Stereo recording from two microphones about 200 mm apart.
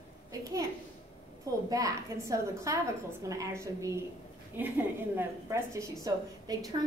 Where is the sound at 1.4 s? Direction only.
15° right (ahead or behind).